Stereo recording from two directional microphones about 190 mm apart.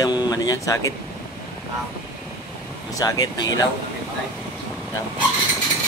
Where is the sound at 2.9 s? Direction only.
20° left (ahead or behind).